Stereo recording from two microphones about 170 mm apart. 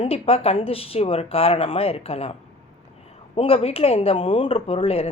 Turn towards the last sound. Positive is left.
turn(degrees=35)  # may be behind; listen again after turning